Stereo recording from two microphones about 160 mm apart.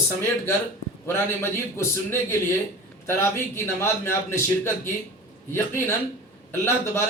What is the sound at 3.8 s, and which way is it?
A man's voice, 15° left (ahead or behind).